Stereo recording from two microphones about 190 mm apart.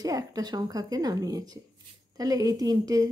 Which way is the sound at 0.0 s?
20° right (ahead or behind).